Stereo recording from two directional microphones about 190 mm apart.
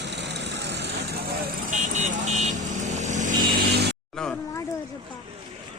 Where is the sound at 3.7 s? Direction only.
60° right (ahead or behind).